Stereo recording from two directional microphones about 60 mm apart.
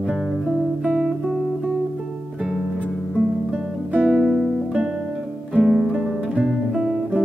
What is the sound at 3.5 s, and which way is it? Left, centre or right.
Music, centre.